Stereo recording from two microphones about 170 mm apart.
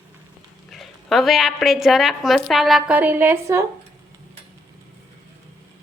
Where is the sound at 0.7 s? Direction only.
Centre (ahead or behind); by 3.6 s 15° right (ahead or behind).